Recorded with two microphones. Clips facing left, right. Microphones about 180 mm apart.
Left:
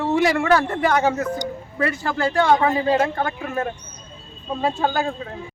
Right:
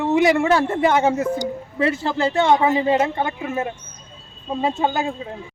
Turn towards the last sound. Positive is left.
turn(degrees=-20)  # may be behind; listen again after turning